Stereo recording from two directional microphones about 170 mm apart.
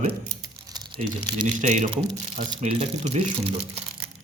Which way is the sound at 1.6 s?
45° right (ahead or behind).